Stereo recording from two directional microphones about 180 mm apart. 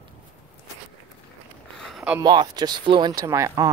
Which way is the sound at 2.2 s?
25° right (ahead or behind).